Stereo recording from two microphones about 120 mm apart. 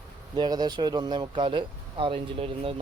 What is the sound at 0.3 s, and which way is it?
Speech, 35° right (ahead or behind).